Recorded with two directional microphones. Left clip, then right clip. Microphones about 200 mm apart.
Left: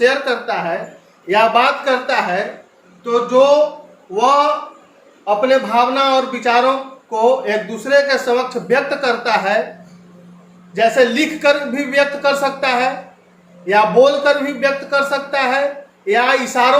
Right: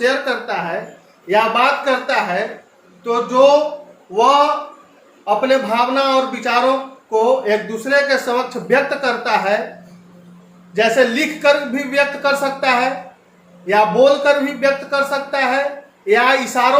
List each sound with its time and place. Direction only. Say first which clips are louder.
0.0 s speech: left 2 dB; 20° left (ahead or behind)
10.8 s speech: left 1 dB; 20° left (ahead or behind)